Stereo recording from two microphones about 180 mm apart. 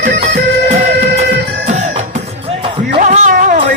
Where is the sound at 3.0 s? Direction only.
45° right (ahead or behind).